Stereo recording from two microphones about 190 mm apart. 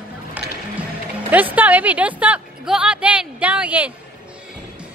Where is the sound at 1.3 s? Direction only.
10° right (ahead or behind).